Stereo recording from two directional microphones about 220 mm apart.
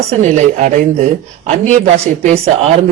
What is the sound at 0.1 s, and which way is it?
A man's voice, 30° right (ahead or behind).